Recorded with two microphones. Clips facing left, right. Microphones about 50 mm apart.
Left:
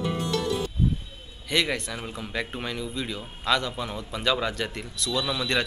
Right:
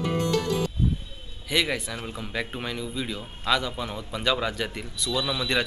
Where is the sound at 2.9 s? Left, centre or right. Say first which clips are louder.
Even; centre.